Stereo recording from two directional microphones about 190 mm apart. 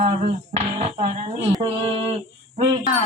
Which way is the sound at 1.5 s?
25° right (ahead or behind).